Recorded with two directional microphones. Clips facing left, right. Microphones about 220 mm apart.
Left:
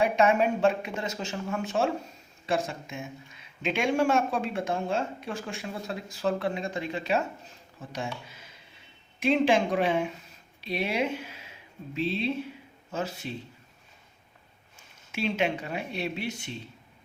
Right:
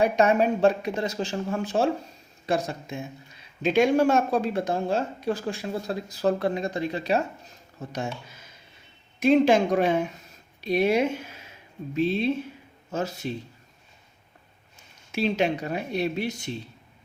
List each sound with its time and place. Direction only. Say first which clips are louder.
0.0 s speech: right 2 dB; 40° right (ahead or behind)
15.1 s speech: right 4 dB; 35° right (ahead or behind)